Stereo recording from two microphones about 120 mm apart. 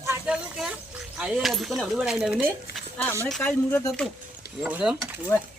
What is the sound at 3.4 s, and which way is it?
Speech, 15° left (ahead or behind).